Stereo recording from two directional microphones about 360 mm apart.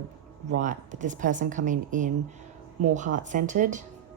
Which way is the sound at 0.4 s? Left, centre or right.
Right.